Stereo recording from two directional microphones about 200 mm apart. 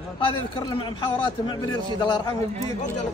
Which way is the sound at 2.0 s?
20° left (ahead or behind).